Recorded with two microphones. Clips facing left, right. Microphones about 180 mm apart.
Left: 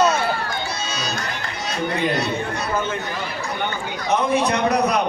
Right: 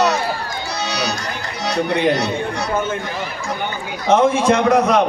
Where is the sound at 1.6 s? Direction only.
70° right (ahead or behind).